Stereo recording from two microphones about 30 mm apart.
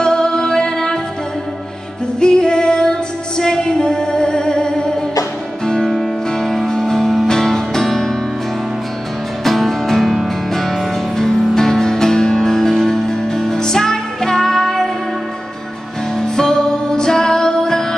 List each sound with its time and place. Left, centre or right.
0.0 s music: left
2.1 s female singing: left
3.7 s music: left
6.3 s music: centre
9.4 s music: centre
16.2 s music: centre